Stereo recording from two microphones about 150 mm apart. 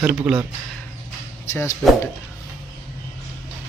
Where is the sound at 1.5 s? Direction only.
20° left (ahead or behind).